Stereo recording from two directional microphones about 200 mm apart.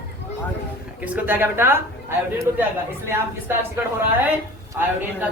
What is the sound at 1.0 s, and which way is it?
Speech, 10° right (ahead or behind).